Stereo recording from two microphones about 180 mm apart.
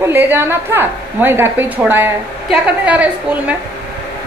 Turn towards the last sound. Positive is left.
turn(degrees=-10)  # may be behind; listen again after turning